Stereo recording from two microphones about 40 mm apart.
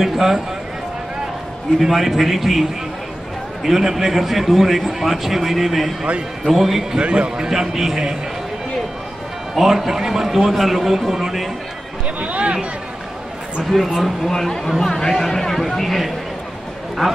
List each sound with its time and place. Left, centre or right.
0.0 s speech: centre
1.8 s a man's voice: centre
3.6 s a man's voice: centre
7.0 s a man's voice: right
9.6 s a man's voice: centre
12.2 s speech: right
13.7 s a man's voice: centre